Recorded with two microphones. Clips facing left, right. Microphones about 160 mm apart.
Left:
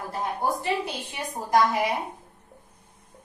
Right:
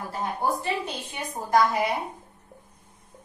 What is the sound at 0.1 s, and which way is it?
A woman's voice, 15° left (ahead or behind).